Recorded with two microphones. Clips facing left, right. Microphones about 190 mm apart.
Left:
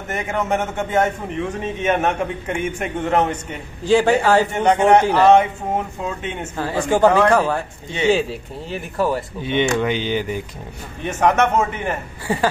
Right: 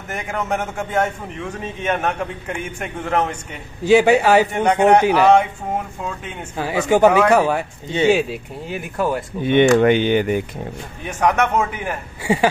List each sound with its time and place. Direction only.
0.1 s a man's voice: 5° left (ahead or behind)
3.8 s a man's voice: 10° right (ahead or behind)
6.5 s a man's voice: 15° right (ahead or behind)
8.9 s a man's voice: 5° left (ahead or behind)
9.4 s speech: 55° right (ahead or behind)
11.2 s a man's voice: centre (ahead or behind)